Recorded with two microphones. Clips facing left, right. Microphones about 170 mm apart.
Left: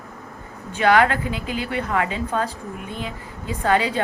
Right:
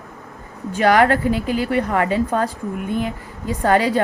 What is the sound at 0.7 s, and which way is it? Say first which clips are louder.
A woman's voice: right 3 dB; 40° right (ahead or behind).